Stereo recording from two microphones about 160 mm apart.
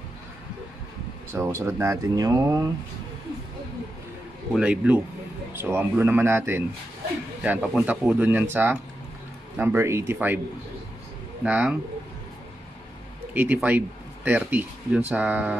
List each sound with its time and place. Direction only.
1.3 s speech: 15° right (ahead or behind)
4.6 s speech: 5° right (ahead or behind)
11.4 s speech: 10° right (ahead or behind)
13.3 s speech: 10° right (ahead or behind)